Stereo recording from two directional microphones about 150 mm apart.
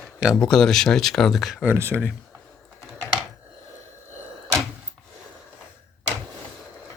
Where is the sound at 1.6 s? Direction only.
15° right (ahead or behind).